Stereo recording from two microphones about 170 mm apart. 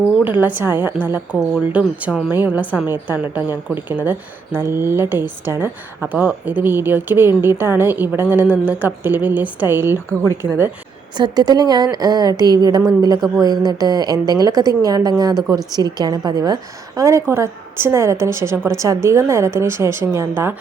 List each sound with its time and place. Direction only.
0.3 s a woman's voice: 10° right (ahead or behind)
11.2 s a woman's voice: 25° right (ahead or behind)